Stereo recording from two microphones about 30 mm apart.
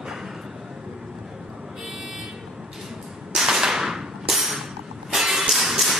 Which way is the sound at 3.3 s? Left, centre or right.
Centre.